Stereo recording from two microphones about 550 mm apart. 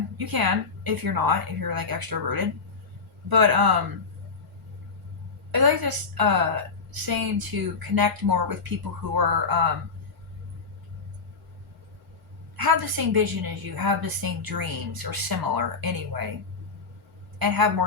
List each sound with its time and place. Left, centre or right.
0.2 s a woman's voice: right
5.5 s a woman's voice: right
12.5 s a woman's voice: right
17.4 s a woman's voice: right